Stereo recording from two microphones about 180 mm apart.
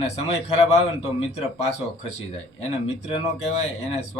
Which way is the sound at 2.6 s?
40° left (ahead or behind).